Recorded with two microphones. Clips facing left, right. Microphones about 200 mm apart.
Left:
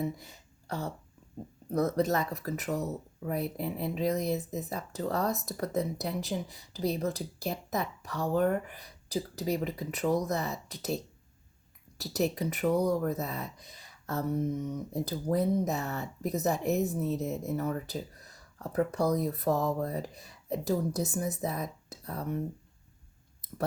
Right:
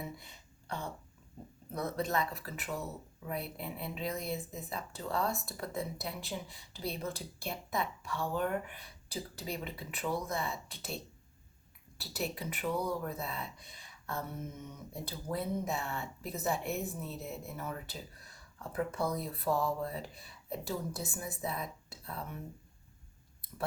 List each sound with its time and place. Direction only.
0.0 s speech: 40° left (ahead or behind)